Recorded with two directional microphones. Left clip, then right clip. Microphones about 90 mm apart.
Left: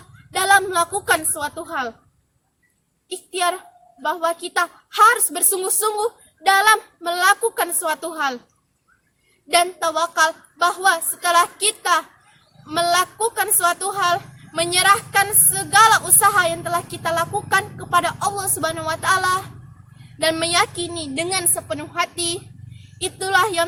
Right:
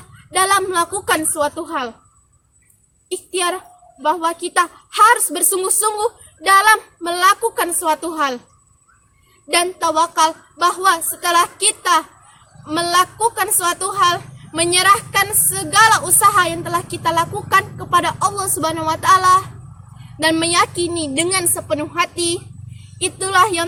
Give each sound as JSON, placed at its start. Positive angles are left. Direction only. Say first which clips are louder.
{"t": 0.3, "sound": "a woman's voice", "louder": "right 1 dB", "side_deg": 25}
{"t": 3.1, "sound": "a woman's voice", "louder": "right 1 dB", "side_deg": 20}
{"t": 9.5, "sound": "a woman's voice", "louder": "right 1 dB", "side_deg": 25}